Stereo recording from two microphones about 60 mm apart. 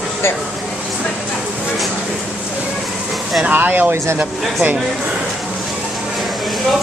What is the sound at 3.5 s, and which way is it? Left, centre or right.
Speech, right.